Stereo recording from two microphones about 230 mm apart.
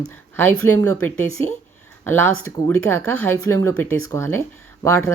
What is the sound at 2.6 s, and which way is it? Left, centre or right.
Speech, centre.